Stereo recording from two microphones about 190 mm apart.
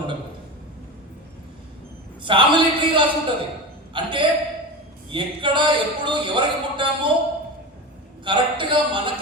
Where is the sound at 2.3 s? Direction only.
25° right (ahead or behind).